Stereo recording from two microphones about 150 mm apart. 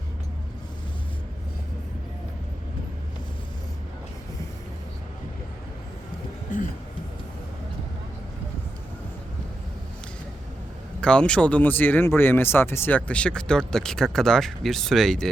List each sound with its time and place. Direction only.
11.0 s speech: 5° left (ahead or behind)